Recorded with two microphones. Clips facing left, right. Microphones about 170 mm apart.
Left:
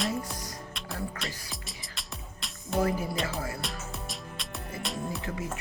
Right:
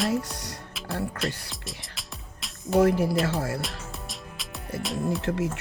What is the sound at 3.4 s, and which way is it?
Music, 75° right (ahead or behind).